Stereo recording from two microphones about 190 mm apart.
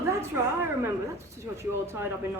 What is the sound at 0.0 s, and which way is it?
A woman's voice, 15° right (ahead or behind).